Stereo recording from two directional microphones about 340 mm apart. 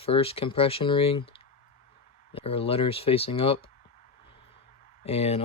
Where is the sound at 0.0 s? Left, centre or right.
Centre.